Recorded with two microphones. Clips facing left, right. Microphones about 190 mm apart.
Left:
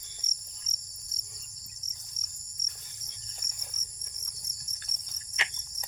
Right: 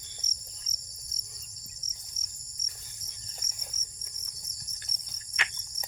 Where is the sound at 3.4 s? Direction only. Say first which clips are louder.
Right 1 dB; 60° left (ahead or behind).